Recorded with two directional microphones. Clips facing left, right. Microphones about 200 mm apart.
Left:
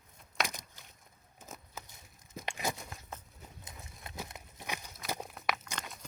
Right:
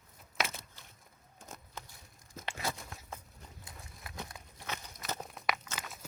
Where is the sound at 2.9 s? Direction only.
Centre (ahead or behind).